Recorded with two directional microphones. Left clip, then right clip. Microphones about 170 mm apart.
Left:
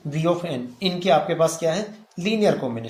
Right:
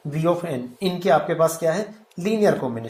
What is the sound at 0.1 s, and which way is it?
Speech, 10° right (ahead or behind).